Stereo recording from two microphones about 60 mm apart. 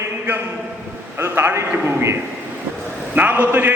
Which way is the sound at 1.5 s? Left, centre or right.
Right.